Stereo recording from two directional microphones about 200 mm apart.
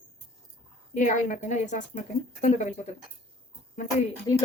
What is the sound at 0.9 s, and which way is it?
Speech, 40° left (ahead or behind).